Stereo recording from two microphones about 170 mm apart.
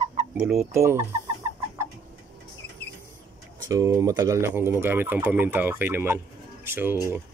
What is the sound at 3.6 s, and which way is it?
Speech, 20° right (ahead or behind).